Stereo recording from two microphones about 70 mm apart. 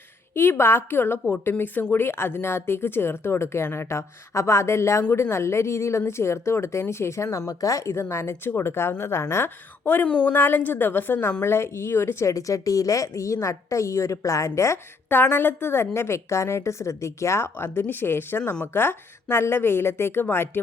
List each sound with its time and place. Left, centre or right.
0.3 s speech: left
12.3 s a woman's voice: left
15.1 s speech: left